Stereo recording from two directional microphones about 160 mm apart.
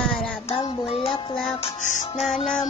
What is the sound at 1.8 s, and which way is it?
Music, 50° left (ahead or behind).